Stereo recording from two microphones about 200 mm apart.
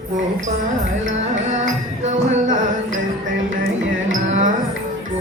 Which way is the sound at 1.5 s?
35° right (ahead or behind).